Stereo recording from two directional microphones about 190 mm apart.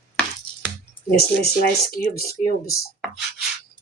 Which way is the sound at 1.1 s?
55° left (ahead or behind).